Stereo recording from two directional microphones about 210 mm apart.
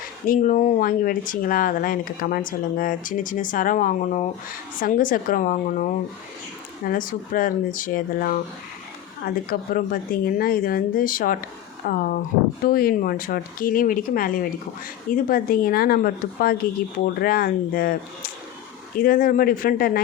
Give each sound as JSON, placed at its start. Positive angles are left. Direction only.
{"t": 0.3, "sound": "speech", "side_deg": 35}
{"t": 18.9, "sound": "speech", "side_deg": 45}